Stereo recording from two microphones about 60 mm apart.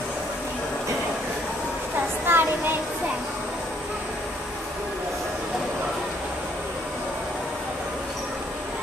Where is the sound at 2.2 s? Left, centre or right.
Right.